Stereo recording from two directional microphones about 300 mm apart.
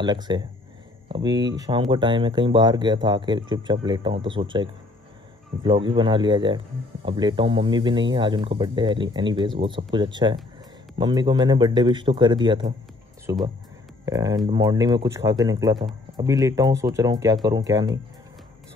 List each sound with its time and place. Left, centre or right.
0.0 s speech: centre